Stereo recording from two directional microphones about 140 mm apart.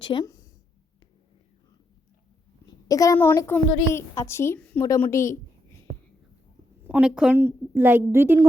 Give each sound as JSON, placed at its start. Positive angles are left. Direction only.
{"t": 0.0, "sound": "a woman's voice", "side_deg": 35}
{"t": 2.8, "sound": "a child's voice", "side_deg": 25}
{"t": 6.8, "sound": "a woman's voice", "side_deg": -10}